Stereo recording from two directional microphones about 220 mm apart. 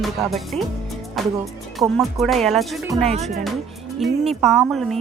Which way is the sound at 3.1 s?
30° right (ahead or behind).